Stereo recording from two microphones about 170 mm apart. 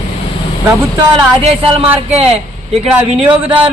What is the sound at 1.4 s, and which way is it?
Speech, 35° right (ahead or behind).